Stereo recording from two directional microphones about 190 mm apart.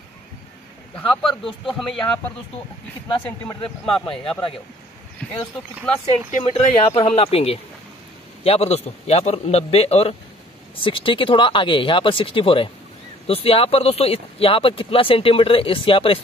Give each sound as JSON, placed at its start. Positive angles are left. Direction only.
{"t": 0.9, "sound": "speech", "side_deg": 5}
{"t": 3.1, "sound": "speech", "side_deg": 25}
{"t": 5.2, "sound": "speech", "side_deg": 5}
{"t": 6.4, "sound": "a man's voice", "side_deg": 30}